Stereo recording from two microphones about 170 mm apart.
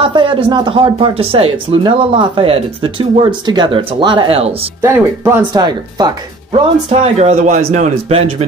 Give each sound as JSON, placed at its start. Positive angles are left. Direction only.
{"t": 0.0, "sound": "speech", "side_deg": -30}
{"t": 4.8, "sound": "speech", "side_deg": -15}
{"t": 5.5, "sound": "speech", "side_deg": -25}
{"t": 6.9, "sound": "speech", "side_deg": -40}